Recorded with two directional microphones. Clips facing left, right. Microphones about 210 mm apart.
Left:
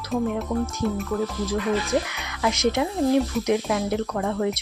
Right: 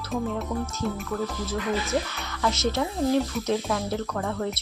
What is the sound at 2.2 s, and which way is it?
Speech, 15° left (ahead or behind).